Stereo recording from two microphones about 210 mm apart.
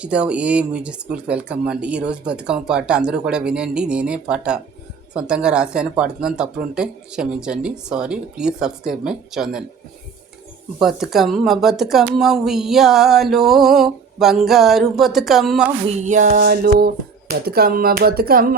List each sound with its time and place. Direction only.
0.0 s speech: 5° right (ahead or behind)
10.8 s speech: centre (ahead or behind)
15.9 s speech: 35° right (ahead or behind)